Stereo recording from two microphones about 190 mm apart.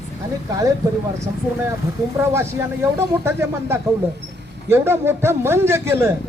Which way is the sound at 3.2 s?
10° right (ahead or behind).